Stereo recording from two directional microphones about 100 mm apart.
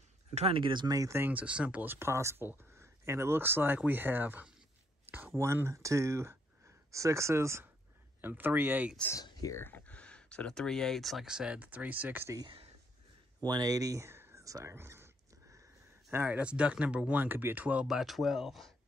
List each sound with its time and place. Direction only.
0.3 s speech: 75° right (ahead or behind); by 0.9 s 55° right (ahead or behind)
0.9 s speech: 30° right (ahead or behind)
1.3 s speech: 10° right (ahead or behind)
9.2 s speech: 40° left (ahead or behind)
9.6 s speech: 20° left (ahead or behind); by 12.4 s 20° right (ahead or behind)
13.4 s speech: 40° right (ahead or behind); by 15.0 s 25° right (ahead or behind)
16.1 s speech: 20° right (ahead or behind)
17.8 s speech: 5° right (ahead or behind)